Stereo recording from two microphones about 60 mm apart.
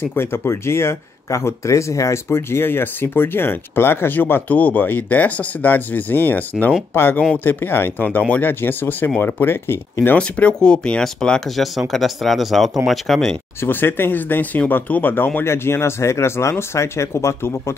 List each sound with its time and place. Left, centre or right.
0.1 s speech: left
10.1 s speech: left; by 13.4 s centre
13.6 s speech: left
15.4 s speech: left